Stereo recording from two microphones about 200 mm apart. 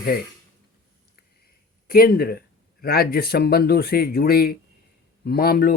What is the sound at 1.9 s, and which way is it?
Speech, 50° left (ahead or behind).